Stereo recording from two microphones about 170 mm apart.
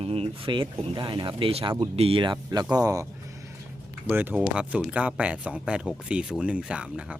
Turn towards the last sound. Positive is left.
turn(degrees=-5)  # may be behind; listen again after turning